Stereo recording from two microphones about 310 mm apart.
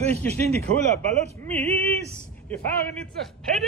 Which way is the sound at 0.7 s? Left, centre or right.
Centre.